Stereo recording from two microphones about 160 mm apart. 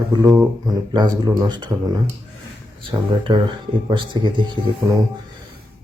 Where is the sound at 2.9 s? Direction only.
30° right (ahead or behind).